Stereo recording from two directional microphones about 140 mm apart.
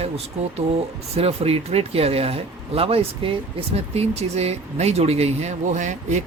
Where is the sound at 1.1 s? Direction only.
45° right (ahead or behind).